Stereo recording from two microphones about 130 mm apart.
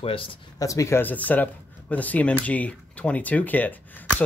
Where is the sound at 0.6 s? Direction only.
25° left (ahead or behind).